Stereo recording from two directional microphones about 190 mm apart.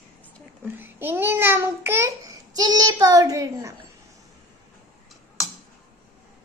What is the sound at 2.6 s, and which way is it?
A child's voice, 20° right (ahead or behind).